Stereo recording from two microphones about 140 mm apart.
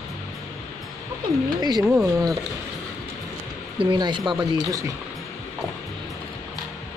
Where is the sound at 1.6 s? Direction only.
30° right (ahead or behind).